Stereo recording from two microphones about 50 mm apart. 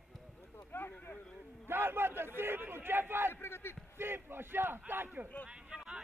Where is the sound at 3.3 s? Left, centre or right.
Left.